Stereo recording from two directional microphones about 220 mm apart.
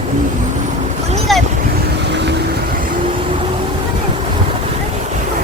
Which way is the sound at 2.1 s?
50° right (ahead or behind).